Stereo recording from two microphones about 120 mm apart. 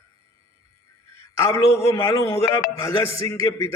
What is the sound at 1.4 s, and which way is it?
A man's voice, 30° left (ahead or behind).